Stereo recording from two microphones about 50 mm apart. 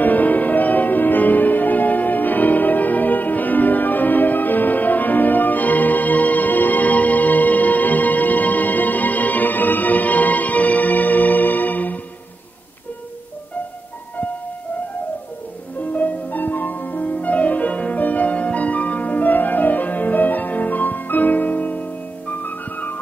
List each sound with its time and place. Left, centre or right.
0.0 s music: left
15.8 s music: left